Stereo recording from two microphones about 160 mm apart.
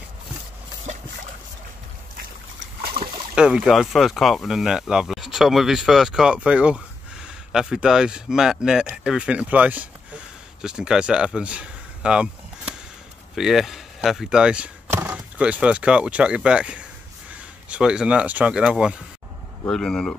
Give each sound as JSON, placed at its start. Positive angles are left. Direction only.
{"t": 3.0, "sound": "boat", "side_deg": -80}
{"t": 3.3, "sound": "speech", "side_deg": -5}